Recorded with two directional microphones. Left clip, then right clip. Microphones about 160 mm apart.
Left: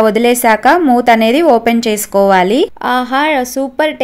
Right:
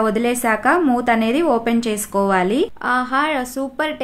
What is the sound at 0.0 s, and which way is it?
A woman's voice, 30° left (ahead or behind).